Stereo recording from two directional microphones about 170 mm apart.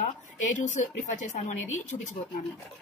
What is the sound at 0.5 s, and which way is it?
A woman's voice, 45° left (ahead or behind).